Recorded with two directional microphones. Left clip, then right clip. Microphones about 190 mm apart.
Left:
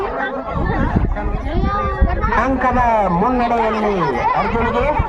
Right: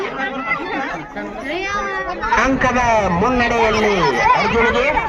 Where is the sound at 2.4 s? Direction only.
65° left (ahead or behind).